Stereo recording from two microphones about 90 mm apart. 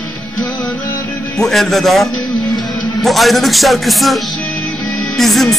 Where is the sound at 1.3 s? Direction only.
5° left (ahead or behind).